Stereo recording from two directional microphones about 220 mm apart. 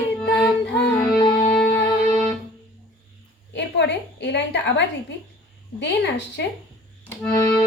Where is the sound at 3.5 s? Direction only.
50° left (ahead or behind).